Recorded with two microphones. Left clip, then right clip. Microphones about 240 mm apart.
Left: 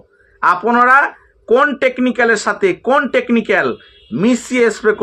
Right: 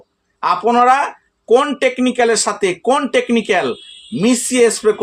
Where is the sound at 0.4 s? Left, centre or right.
Centre.